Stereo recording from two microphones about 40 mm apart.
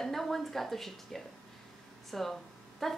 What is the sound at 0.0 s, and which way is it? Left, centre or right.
A woman's voice, centre.